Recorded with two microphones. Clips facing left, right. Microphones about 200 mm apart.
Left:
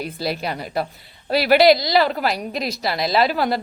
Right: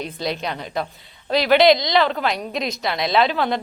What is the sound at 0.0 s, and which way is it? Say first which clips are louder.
A woman's voice: left 1 dB; 5° left (ahead or behind).